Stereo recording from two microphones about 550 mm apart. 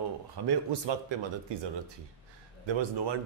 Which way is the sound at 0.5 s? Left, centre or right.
Right.